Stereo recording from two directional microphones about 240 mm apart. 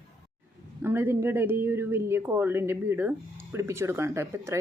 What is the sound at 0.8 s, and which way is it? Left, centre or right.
Speech, centre.